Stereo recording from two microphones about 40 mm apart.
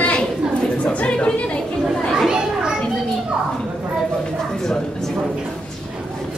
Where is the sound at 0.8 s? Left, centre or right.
Left.